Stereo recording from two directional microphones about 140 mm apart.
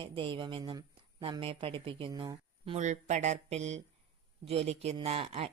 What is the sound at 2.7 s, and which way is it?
Speech, 55° right (ahead or behind).